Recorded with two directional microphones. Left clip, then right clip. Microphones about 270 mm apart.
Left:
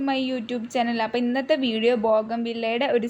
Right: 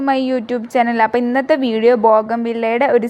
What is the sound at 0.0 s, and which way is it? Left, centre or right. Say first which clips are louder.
A woman's voice: right 9 dB; right.